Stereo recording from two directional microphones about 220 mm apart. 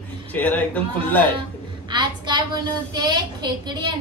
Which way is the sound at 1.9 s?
20° right (ahead or behind).